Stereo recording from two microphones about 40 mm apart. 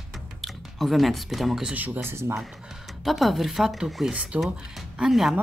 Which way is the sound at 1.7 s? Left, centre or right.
Right.